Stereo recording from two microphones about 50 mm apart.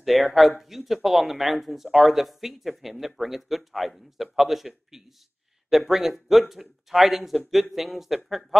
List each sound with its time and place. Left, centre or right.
0.0 s speech: centre